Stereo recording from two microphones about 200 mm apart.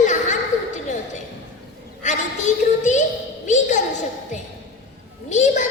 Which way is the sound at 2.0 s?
35° left (ahead or behind).